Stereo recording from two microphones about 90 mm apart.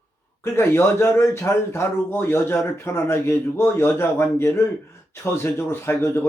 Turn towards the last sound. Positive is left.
turn(degrees=25)  # may be behind; listen again after turning